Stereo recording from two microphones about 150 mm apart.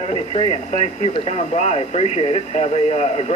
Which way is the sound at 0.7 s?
50° left (ahead or behind).